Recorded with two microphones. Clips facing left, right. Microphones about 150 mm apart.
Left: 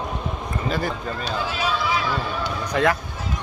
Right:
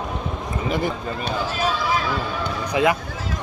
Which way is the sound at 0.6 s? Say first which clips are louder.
Right 2 dB; 15° right (ahead or behind).